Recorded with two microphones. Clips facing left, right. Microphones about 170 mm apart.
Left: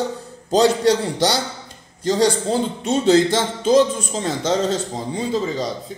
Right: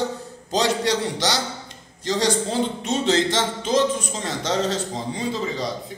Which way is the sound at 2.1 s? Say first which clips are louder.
Left 4 dB; 35° left (ahead or behind).